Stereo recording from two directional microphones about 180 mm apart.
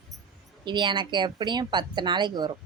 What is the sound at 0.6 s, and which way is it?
Speech, 25° right (ahead or behind).